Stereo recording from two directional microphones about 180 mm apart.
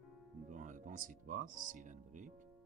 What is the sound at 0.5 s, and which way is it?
Speech, 45° right (ahead or behind).